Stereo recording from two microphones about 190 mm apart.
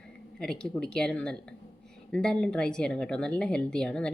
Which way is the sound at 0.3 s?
5° left (ahead or behind).